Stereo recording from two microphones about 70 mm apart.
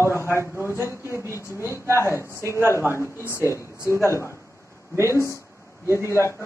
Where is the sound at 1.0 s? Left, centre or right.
Right.